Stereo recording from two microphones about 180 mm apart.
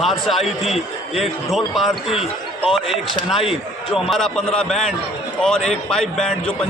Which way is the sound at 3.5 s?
Centre (ahead or behind).